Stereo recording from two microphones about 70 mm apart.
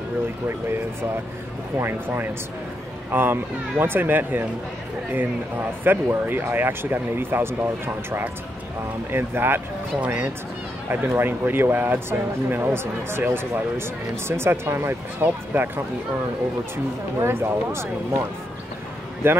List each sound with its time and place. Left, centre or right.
1.8 s speech: right
5.9 s speech: right
9.9 s speech: right
17.2 s speech: right
19.2 s speech: right